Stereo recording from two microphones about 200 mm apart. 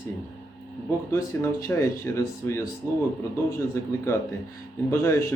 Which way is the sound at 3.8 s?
15° left (ahead or behind).